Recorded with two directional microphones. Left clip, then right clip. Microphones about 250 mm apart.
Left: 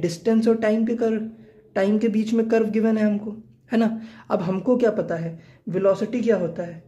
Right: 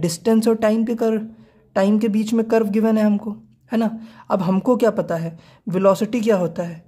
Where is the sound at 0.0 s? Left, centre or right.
Right.